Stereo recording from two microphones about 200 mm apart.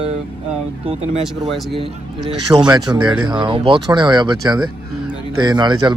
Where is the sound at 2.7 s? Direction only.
20° right (ahead or behind).